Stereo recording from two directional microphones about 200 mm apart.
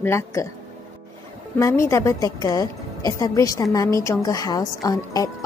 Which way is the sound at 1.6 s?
15° left (ahead or behind).